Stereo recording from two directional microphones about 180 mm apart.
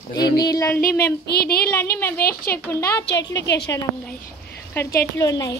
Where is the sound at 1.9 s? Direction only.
15° left (ahead or behind).